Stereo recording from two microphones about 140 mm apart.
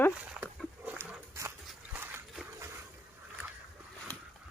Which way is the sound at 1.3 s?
20° right (ahead or behind).